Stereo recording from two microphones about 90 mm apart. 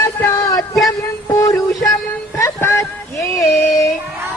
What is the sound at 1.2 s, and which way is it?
Synthetic singing, 35° left (ahead or behind).